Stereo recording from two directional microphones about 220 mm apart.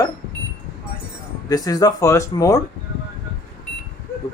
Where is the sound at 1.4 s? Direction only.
15° left (ahead or behind).